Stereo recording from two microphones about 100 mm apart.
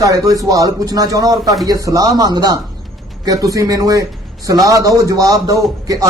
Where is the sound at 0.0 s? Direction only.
35° right (ahead or behind).